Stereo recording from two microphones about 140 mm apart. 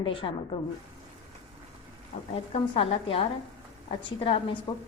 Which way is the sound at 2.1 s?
65° left (ahead or behind).